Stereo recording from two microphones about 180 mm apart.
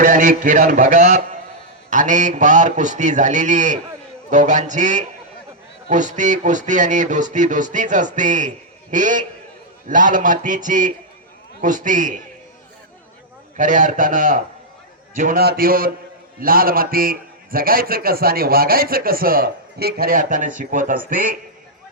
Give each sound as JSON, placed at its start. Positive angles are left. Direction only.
{"t": 0.0, "sound": "a man's voice", "side_deg": -45}
{"t": 13.6, "sound": "a man's voice", "side_deg": -45}